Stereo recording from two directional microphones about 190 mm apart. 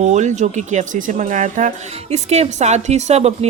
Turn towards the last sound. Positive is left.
turn(degrees=-35)  # may be behind; listen again after turning